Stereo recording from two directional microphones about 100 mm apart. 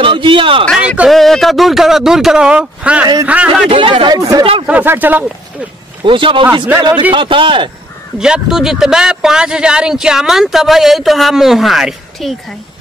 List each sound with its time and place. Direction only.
0.0 s a man's voice: 55° right (ahead or behind)
0.7 s speech: 10° right (ahead or behind)
1.1 s speech: 5° left (ahead or behind); by 3.6 s 15° right (ahead or behind)
3.6 s speech: 60° right (ahead or behind)
4.2 s speech: 35° right (ahead or behind)
4.6 s speech: 15° right (ahead or behind)
6.0 s speech: 60° right (ahead or behind)
8.2 s speech: 5° right (ahead or behind)